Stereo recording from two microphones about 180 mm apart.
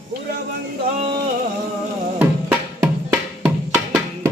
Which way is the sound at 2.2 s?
10° right (ahead or behind).